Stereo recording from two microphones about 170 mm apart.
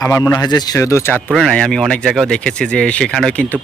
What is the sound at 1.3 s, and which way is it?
Speech, 5° left (ahead or behind).